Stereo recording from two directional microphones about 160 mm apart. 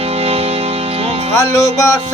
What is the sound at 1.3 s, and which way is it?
Speech, 20° left (ahead or behind).